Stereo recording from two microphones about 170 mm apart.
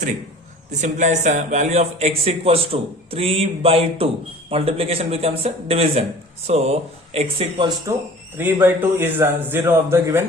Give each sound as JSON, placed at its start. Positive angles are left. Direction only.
{"t": 0.7, "sound": "a man's voice", "side_deg": -45}
{"t": 8.4, "sound": "a man's voice", "side_deg": -10}